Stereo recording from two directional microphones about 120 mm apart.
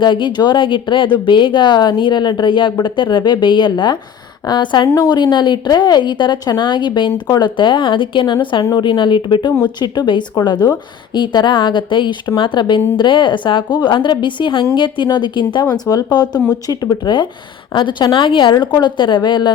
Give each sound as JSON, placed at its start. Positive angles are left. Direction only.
{"t": 0.0, "sound": "speech", "side_deg": 40}